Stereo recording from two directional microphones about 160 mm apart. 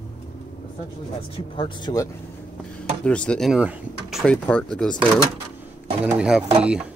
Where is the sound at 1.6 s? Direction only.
30° left (ahead or behind).